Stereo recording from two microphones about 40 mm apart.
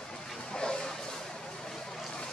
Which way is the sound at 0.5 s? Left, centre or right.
Left.